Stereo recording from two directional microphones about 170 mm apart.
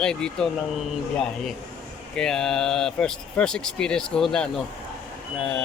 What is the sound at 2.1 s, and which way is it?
Speech, 5° left (ahead or behind).